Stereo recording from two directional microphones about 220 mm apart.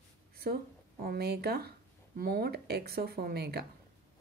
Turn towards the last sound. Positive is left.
turn(degrees=-45)  # may be behind; listen again after turning